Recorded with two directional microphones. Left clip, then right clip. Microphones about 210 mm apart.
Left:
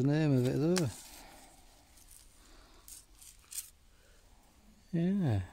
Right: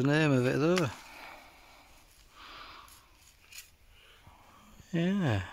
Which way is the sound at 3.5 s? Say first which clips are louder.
Left 2 dB; 55° left (ahead or behind).